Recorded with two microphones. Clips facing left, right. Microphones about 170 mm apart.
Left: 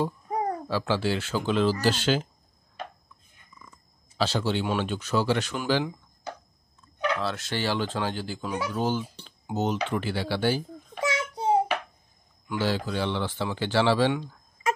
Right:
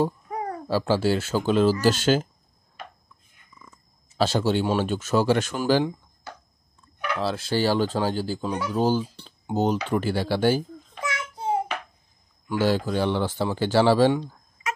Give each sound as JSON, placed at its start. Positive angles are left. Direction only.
{"t": 0.7, "sound": "speech", "side_deg": -40}
{"t": 4.2, "sound": "speech", "side_deg": -45}
{"t": 7.2, "sound": "speech", "side_deg": -30}
{"t": 11.0, "sound": "child singing", "side_deg": 25}
{"t": 12.4, "sound": "speech", "side_deg": -45}